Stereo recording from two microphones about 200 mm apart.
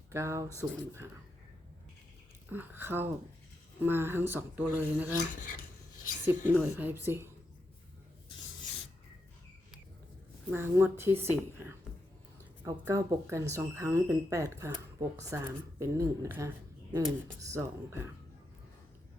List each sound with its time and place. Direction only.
0.1 s speech: 15° right (ahead or behind)
2.5 s speech: 10° right (ahead or behind)
6.2 s speech: 10° right (ahead or behind)
10.5 s speech: 10° right (ahead or behind)
12.6 s speech: 15° right (ahead or behind)